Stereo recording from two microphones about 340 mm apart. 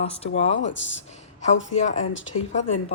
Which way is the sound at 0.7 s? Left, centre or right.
Left.